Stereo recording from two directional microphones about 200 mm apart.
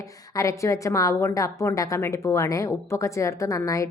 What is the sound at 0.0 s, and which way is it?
A woman's voice, 15° left (ahead or behind).